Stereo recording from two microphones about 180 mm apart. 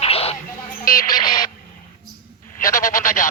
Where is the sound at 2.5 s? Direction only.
50° left (ahead or behind).